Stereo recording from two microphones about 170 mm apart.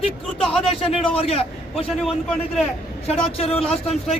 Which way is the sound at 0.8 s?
35° left (ahead or behind).